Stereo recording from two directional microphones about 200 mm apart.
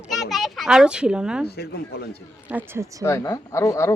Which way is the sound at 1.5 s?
55° left (ahead or behind).